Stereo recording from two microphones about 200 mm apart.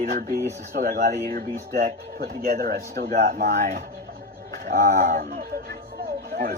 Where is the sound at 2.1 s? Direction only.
50° right (ahead or behind).